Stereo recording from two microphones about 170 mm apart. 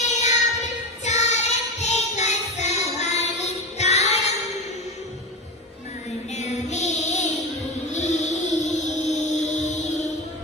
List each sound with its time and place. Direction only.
0.1 s child singing: 45° left (ahead or behind)
6.3 s child singing: 40° left (ahead or behind)
7.9 s music: 45° left (ahead or behind)